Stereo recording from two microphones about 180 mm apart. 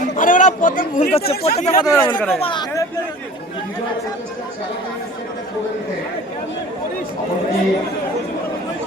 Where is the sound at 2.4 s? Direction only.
20° left (ahead or behind).